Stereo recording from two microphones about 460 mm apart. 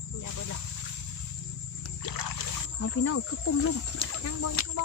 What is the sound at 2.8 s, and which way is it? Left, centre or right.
Speech, left.